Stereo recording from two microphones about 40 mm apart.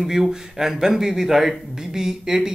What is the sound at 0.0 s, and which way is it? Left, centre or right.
Speech, centre.